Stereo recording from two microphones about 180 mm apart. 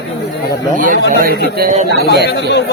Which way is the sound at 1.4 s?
60° right (ahead or behind).